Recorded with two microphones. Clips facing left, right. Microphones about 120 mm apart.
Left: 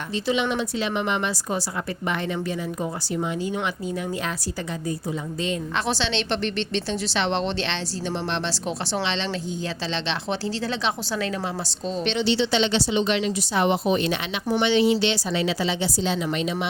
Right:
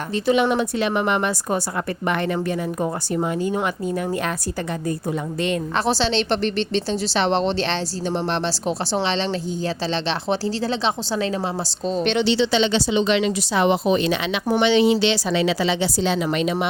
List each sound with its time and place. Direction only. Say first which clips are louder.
0.3 s a woman's voice: right 6 dB; 50° right (ahead or behind)
2.8 s a woman's voice: right 4 dB; 50° right (ahead or behind)
5.7 s a woman's voice: right 6 dB; 35° right (ahead or behind)
11.9 s a woman's voice: right 5 dB; 40° right (ahead or behind)
12.1 s a woman's voice: right 2 dB; 90° right; by 16.6 s 65° right (ahead or behind)